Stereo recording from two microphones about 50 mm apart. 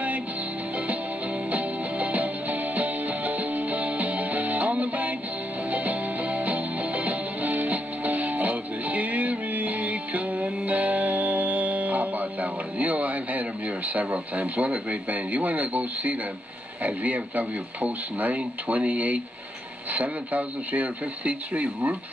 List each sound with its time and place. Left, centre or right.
1.5 s music: right
16.8 s speech: right